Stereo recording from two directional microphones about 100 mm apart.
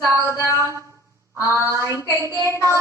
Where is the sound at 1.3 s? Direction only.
30° right (ahead or behind).